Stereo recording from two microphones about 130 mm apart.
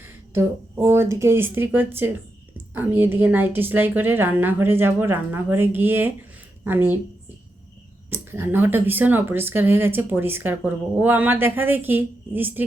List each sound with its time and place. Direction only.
0.0 s speech: 20° right (ahead or behind)
8.1 s speech: 20° right (ahead or behind)